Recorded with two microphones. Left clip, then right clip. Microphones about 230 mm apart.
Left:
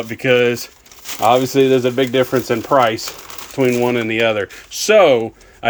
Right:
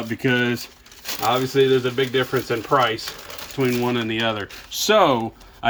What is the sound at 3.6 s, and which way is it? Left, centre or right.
Speech, left.